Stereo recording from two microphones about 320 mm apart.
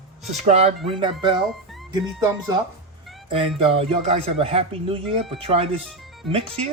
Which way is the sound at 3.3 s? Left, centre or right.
Centre.